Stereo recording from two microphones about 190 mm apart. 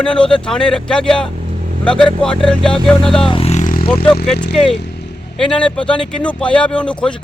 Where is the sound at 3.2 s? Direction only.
30° left (ahead or behind).